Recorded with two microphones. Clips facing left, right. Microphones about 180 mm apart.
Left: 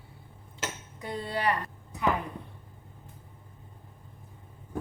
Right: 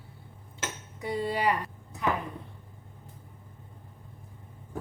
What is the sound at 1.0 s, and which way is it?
Speech, 10° right (ahead or behind).